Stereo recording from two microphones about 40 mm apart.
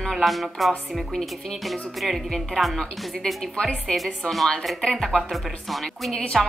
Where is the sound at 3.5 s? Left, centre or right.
Left.